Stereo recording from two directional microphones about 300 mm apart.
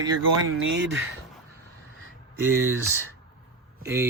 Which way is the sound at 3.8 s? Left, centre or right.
Centre.